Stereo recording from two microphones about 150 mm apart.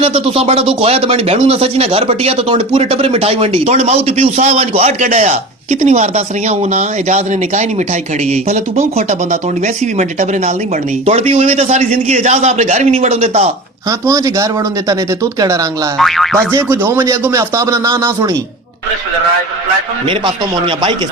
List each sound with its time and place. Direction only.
0.0 s a man's voice: 40° right (ahead or behind)
14.1 s speech: 20° right (ahead or behind)
16.0 s boing: centre (ahead or behind)
16.6 s speech: 15° right (ahead or behind)
20.1 s speech: 35° right (ahead or behind)